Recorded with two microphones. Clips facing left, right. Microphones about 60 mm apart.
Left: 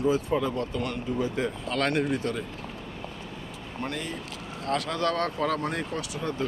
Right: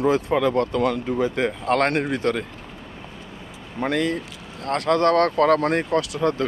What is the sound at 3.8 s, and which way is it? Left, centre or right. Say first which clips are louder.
Speech: right 12 dB; right.